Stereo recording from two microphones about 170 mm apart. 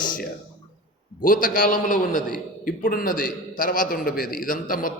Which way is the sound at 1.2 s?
50° left (ahead or behind).